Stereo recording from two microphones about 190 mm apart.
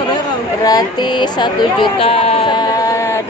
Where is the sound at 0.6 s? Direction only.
20° left (ahead or behind).